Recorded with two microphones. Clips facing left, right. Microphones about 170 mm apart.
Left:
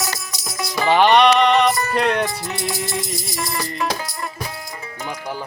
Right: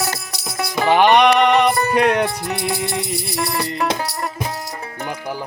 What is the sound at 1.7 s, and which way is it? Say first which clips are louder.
Music: right 3 dB; 60° right (ahead or behind).